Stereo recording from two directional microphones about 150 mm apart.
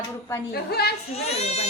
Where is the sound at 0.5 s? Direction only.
90° left.